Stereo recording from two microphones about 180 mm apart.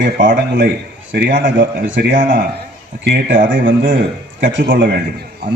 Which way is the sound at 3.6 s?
50° right (ahead or behind).